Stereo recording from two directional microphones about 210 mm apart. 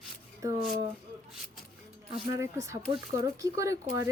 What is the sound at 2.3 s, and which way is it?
Speech, 15° right (ahead or behind).